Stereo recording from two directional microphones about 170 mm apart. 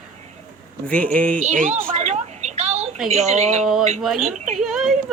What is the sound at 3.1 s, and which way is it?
Speech, 40° right (ahead or behind).